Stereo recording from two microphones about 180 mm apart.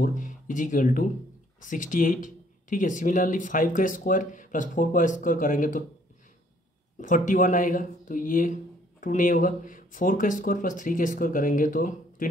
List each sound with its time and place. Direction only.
0.0 s speech: 45° left (ahead or behind)
7.0 s speech: 50° left (ahead or behind)